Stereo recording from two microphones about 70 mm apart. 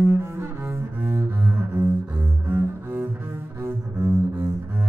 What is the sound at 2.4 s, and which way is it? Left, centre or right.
Cello, right.